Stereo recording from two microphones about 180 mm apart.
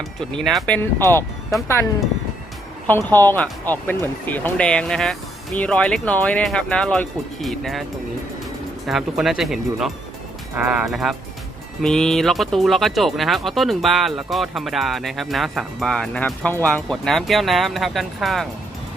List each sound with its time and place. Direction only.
0.4 s speech: centre (ahead or behind)
8.9 s speech: centre (ahead or behind)